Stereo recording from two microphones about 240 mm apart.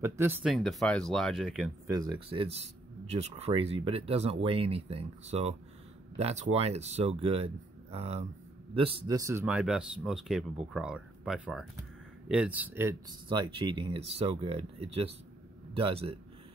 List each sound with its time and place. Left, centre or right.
0.0 s speech: centre
1.9 s speech: centre